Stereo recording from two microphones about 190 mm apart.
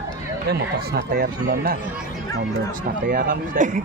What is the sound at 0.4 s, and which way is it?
Speech, 55° right (ahead or behind).